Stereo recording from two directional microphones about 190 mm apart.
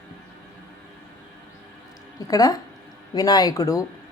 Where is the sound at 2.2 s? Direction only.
20° left (ahead or behind).